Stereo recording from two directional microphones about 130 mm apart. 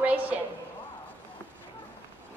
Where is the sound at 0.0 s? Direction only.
10° right (ahead or behind).